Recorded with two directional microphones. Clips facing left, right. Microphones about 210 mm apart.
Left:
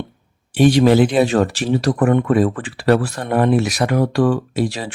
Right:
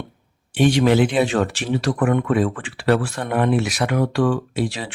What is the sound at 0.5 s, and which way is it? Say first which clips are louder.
Speech: left 4 dB; 35° left (ahead or behind).